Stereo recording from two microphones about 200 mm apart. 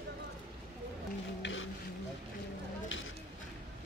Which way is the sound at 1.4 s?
70° left (ahead or behind).